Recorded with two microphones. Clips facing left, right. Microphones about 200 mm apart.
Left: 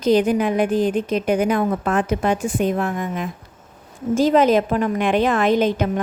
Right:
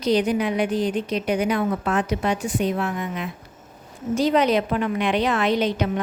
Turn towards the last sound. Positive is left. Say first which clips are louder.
# left 4 dB
turn(degrees=50)  # may be behind; listen again after turning